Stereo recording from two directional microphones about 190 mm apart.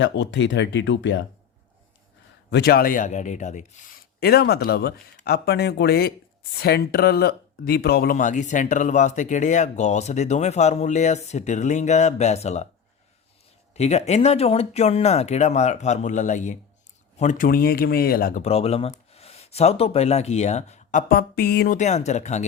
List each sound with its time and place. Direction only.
0.0 s speech: 70° left (ahead or behind)
2.5 s speech: 55° left (ahead or behind); by 12.6 s 35° left (ahead or behind)
13.7 s speech: 35° left (ahead or behind); by 18.4 s 50° left (ahead or behind)
18.4 s speech: 30° left (ahead or behind)
21.1 s a sound: 55° left (ahead or behind)
21.8 s speech: 35° left (ahead or behind)